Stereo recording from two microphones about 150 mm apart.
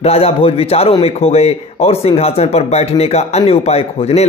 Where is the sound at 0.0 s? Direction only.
40° left (ahead or behind).